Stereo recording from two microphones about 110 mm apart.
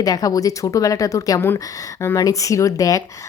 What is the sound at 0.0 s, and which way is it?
Speech, 35° left (ahead or behind).